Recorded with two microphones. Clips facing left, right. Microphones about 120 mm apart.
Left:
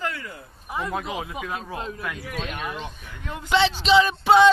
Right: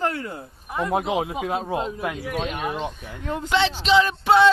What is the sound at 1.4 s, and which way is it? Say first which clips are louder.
Speech: right 6 dB; 35° right (ahead or behind).